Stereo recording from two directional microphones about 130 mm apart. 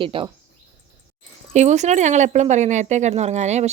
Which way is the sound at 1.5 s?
60° right (ahead or behind).